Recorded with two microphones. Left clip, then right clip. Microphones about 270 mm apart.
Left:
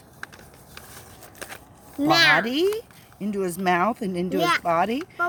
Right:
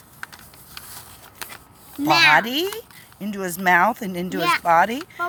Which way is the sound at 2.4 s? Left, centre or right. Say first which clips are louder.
Left 2 dB; centre.